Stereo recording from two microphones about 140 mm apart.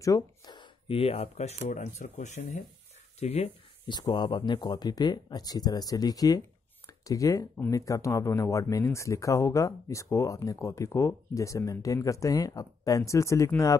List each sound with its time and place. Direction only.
0.0 s speech: 25° left (ahead or behind); by 2.6 s 55° left (ahead or behind)
3.2 s speech: 45° left (ahead or behind)
4.0 s speech: 30° left (ahead or behind)